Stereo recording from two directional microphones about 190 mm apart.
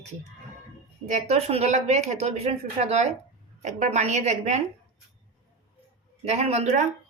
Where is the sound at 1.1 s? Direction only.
35° right (ahead or behind).